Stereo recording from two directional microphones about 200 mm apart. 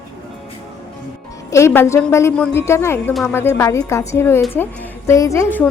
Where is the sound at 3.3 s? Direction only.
15° left (ahead or behind).